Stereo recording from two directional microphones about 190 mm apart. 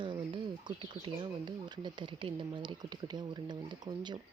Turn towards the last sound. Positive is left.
turn(degrees=-25)  # may be behind; listen again after turning